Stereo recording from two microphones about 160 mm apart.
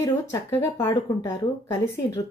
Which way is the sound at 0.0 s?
15° left (ahead or behind).